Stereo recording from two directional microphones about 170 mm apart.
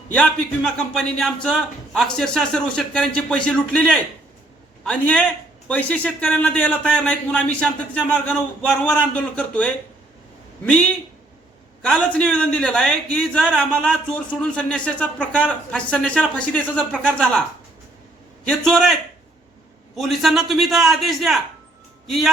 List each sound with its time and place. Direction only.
0.1 s speech: 5° left (ahead or behind)
4.9 s a man's voice: 10° left (ahead or behind)
11.8 s a man's voice: 5° left (ahead or behind)
18.4 s speech: 5° left (ahead or behind)
20.0 s speech: centre (ahead or behind)